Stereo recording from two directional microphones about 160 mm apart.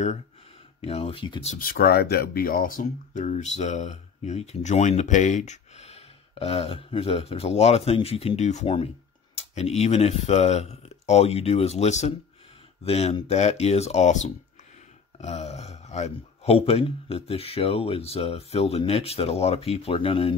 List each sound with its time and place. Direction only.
0.7 s speech: 40° left (ahead or behind)
1.6 s speech: 70° left (ahead or behind); by 20.3 s 35° left (ahead or behind)